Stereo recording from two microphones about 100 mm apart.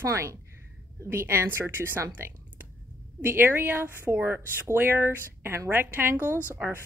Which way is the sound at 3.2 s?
20° right (ahead or behind).